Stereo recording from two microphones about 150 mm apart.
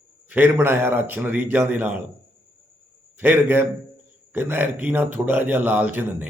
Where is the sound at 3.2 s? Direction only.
15° right (ahead or behind).